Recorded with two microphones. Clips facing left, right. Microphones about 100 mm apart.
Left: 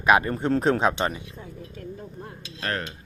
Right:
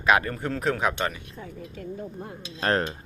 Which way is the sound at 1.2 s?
55° right (ahead or behind).